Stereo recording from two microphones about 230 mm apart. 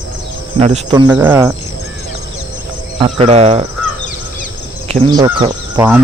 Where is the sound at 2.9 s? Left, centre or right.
Right.